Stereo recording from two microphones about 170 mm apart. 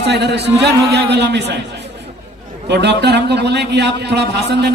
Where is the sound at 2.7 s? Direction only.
80° right.